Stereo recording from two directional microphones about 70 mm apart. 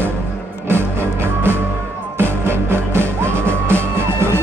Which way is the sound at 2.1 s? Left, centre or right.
Right.